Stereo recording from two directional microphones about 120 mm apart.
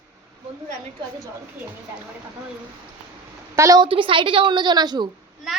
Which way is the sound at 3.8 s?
45° right (ahead or behind).